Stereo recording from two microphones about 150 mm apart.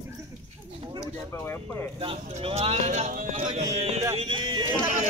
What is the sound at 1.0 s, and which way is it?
Speech, 15° left (ahead or behind).